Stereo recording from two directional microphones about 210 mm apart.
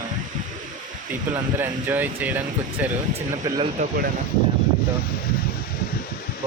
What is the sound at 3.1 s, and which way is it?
Speech, 25° right (ahead or behind).